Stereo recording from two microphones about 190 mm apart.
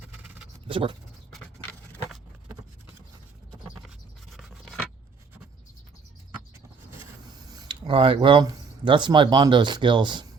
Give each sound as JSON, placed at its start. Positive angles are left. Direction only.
{"t": 0.7, "sound": "speech", "side_deg": -25}
{"t": 3.8, "sound": "a sound", "side_deg": 0}
{"t": 7.3, "sound": "speech", "side_deg": -20}